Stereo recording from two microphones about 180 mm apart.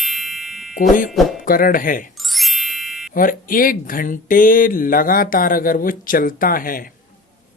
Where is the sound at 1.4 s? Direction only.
50° left (ahead or behind).